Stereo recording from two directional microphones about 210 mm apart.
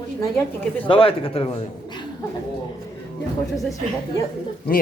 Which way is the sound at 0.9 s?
25° left (ahead or behind).